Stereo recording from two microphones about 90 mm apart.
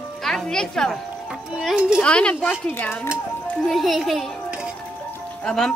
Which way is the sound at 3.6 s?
Centre (ahead or behind).